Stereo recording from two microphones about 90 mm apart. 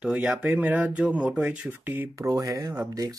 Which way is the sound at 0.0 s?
10° right (ahead or behind).